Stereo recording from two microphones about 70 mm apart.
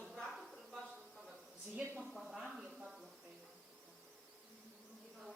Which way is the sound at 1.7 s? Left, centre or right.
Centre.